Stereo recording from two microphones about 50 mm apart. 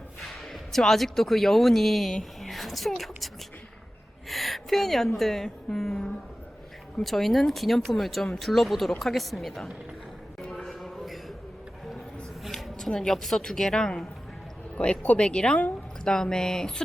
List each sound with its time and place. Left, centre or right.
0.2 s speech: centre
4.3 s a woman's voice: centre
10.5 s a sound: centre
12.4 s a sound: centre
12.9 s a woman's voice: centre
14.8 s a woman's voice: left; by 16.8 s centre